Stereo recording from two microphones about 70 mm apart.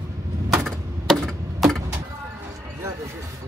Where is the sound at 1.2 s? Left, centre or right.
Centre.